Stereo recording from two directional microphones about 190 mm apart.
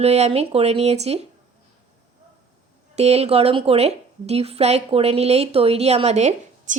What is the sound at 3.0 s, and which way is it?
A woman's voice, 35° right (ahead or behind).